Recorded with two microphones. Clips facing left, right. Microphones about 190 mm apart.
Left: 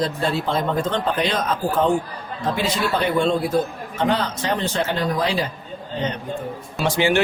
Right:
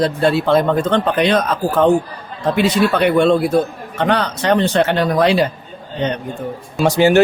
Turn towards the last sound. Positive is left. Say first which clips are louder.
# right 7 dB
turn(degrees=-40)  # may be behind; listen again after turning